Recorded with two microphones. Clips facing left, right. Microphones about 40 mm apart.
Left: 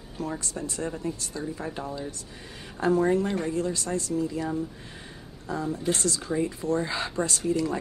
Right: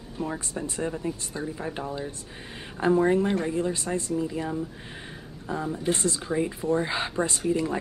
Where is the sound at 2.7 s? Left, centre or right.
Right.